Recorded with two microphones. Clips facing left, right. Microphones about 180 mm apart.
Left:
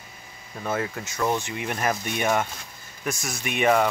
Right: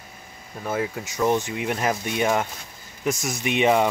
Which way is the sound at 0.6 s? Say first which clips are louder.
Right 1 dB; 10° right (ahead or behind).